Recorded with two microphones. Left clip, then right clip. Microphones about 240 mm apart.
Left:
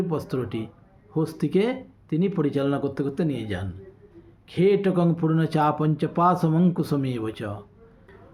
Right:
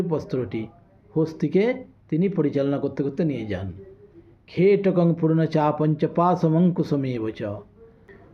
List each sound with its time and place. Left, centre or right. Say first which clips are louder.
0.1 s speech: right 2 dB; centre